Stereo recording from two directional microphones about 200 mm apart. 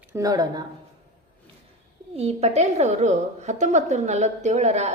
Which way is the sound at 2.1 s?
30° right (ahead or behind).